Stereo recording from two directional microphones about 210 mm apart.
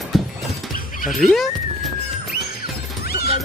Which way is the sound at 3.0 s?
45° left (ahead or behind).